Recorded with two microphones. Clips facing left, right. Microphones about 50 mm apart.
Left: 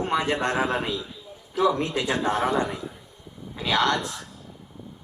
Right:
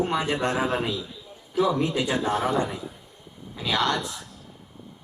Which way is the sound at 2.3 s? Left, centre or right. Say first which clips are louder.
Left 1 dB; centre.